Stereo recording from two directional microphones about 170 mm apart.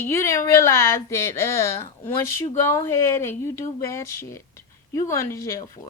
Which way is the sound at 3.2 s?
15° left (ahead or behind).